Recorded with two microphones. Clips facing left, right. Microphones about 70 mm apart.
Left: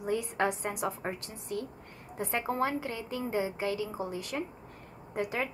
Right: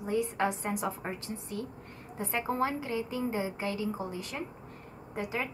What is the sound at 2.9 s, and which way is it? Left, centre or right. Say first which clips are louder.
Speech: right 1 dB; right.